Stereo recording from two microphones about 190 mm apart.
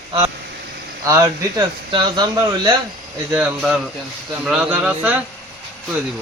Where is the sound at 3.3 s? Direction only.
10° right (ahead or behind).